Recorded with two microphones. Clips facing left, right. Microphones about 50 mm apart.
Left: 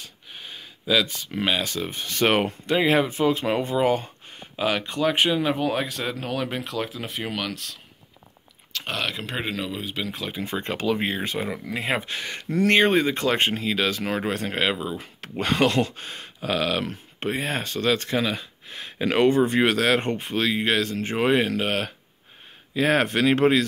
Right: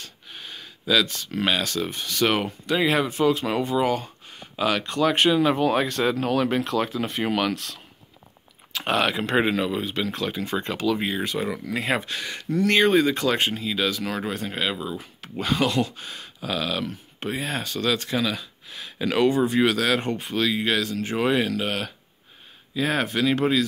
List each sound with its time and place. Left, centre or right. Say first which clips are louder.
0.0 s gasp: right 1 dB; centre
1.6 s speech: right 1 dB; left
2.7 s speech: left 1 dB; left
4.6 s speech: right 1 dB; centre
8.7 s speech: right 6 dB; centre
10.4 s speech: left 1 dB; left
11.4 s speech: right 1 dB; centre
12.1 s speech: right 1 dB; left
14.3 s speech: left 3 dB; left